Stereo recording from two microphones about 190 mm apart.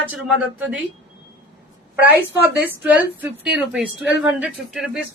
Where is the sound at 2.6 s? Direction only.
10° right (ahead or behind).